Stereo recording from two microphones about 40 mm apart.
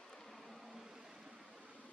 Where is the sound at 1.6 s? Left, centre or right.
Right.